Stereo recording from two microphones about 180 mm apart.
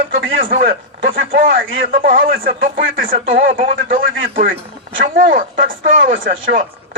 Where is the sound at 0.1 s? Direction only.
55° right (ahead or behind).